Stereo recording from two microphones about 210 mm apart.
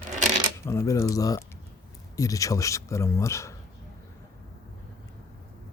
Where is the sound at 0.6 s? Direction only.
15° left (ahead or behind).